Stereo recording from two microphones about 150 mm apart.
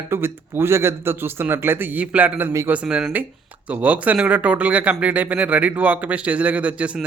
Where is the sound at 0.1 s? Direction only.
15° right (ahead or behind).